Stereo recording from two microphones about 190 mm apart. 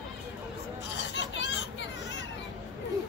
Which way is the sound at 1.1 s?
70° left (ahead or behind).